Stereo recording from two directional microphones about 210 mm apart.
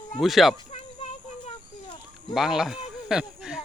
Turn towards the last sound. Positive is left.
turn(degrees=-5)  # may be behind; listen again after turning